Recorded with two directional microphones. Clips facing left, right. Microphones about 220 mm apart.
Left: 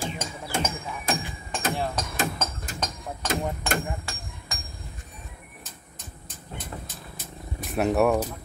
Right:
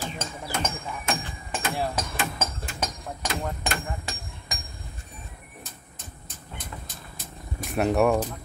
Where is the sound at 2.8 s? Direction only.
10° right (ahead or behind).